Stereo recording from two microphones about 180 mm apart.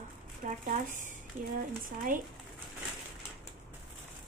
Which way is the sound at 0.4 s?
45° right (ahead or behind).